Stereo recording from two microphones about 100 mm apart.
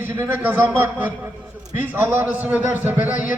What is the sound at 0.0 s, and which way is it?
A man's voice, 20° right (ahead or behind).